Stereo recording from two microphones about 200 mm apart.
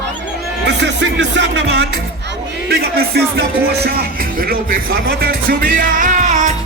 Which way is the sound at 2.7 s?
50° right (ahead or behind).